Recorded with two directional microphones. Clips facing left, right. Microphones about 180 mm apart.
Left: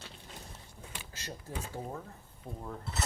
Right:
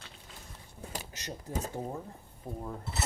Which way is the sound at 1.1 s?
20° right (ahead or behind).